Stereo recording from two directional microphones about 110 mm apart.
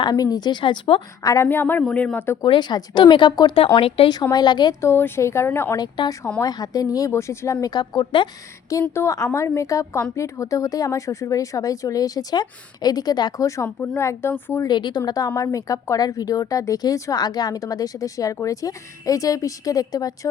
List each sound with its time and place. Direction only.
0.0 s speech: 35° left (ahead or behind)
1.2 s speech: 35° left (ahead or behind)
1.5 s speech: 20° left (ahead or behind)
2.4 s speech: 45° left (ahead or behind)
3.8 s speech: 60° left (ahead or behind)
4.1 s speech: 40° left (ahead or behind)
4.8 s speech: 20° left (ahead or behind)
5.7 s speech: 35° left (ahead or behind)
9.0 s speech: 30° left (ahead or behind)
14.7 s speech: 45° left (ahead or behind)